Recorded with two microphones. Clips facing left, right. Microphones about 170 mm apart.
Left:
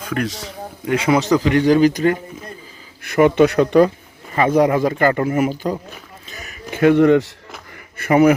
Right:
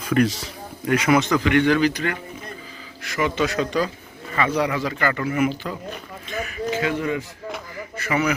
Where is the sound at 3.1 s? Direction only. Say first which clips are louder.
Left 10 dB; 55° left (ahead or behind); by 5.8 s 40° left (ahead or behind).